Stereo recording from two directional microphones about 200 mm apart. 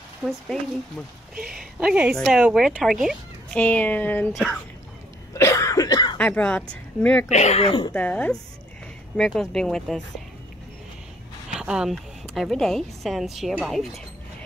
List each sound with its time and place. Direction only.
0.2 s speech: 5° right (ahead or behind)
5.3 s cough: 15° left (ahead or behind)
6.1 s speech: 5° left (ahead or behind)
7.2 s speech: 35° left (ahead or behind)
7.9 s speech: 5° left (ahead or behind)
11.5 s speech: 5° right (ahead or behind)